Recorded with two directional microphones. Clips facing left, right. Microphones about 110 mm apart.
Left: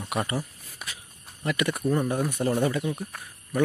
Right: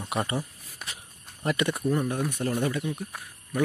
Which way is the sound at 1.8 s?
5° left (ahead or behind).